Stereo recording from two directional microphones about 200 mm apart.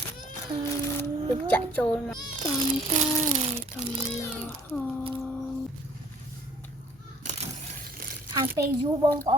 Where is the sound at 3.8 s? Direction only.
Centre (ahead or behind).